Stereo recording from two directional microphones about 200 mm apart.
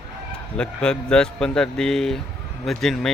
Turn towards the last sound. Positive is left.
turn(degrees=0)  # may be behind; listen again after turning